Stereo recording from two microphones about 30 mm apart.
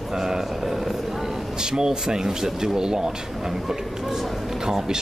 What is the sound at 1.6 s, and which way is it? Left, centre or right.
Speech, right.